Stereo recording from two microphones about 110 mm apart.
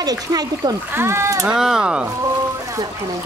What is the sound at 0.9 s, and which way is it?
Speech, 25° right (ahead or behind).